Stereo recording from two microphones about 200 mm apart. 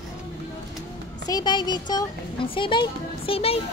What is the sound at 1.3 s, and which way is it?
Speech, 20° left (ahead or behind).